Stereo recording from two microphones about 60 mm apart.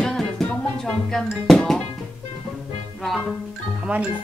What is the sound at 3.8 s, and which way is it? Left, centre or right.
Speech, centre.